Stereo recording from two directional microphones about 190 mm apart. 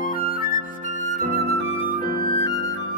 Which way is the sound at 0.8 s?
40° right (ahead or behind).